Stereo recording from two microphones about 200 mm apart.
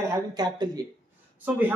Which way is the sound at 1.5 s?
10° right (ahead or behind).